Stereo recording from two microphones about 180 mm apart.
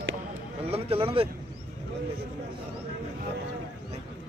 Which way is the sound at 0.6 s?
35° right (ahead or behind).